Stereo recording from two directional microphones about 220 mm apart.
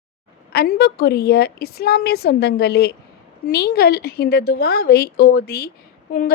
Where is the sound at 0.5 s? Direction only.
45° left (ahead or behind).